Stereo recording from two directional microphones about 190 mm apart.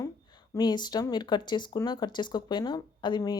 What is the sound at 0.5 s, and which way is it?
Speech, 20° left (ahead or behind).